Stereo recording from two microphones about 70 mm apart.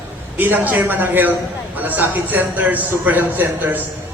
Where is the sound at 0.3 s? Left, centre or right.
Right.